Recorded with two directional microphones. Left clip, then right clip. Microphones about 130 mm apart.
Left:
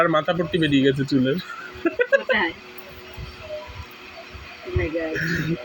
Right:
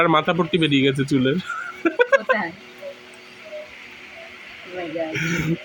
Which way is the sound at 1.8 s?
40° right (ahead or behind).